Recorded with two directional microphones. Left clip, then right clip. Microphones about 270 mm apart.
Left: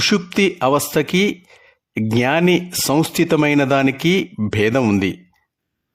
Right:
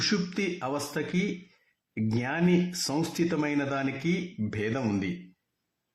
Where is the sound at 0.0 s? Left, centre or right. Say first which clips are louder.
Left 13 dB; left.